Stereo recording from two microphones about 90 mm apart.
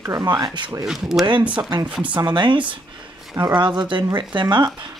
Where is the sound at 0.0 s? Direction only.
45° right (ahead or behind).